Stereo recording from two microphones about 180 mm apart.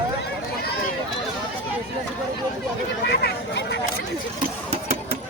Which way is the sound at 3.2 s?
70° left (ahead or behind).